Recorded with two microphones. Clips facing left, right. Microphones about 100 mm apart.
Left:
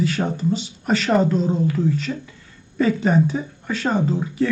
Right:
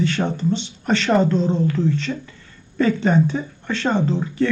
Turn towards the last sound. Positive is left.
turn(degrees=5)  # may be behind; listen again after turning